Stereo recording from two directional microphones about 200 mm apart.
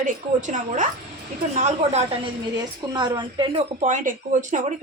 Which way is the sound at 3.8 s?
40° right (ahead or behind).